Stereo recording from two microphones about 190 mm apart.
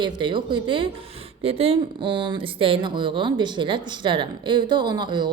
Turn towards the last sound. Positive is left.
turn(degrees=-25)  # may be behind; listen again after turning